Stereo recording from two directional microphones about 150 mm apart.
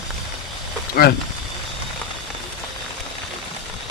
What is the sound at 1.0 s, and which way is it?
Speech, 90° left.